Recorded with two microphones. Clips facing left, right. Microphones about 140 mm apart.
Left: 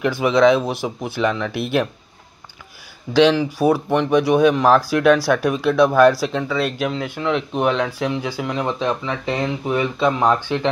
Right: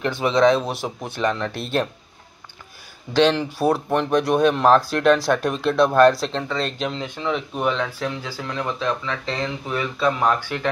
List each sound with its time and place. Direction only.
0.0 s speech: 10° left (ahead or behind)
3.2 s speech: 5° left (ahead or behind); by 10.7 s 20° left (ahead or behind)